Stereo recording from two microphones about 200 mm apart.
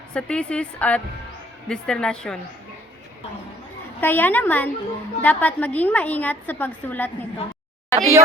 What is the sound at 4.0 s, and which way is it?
A woman's voice, 10° left (ahead or behind).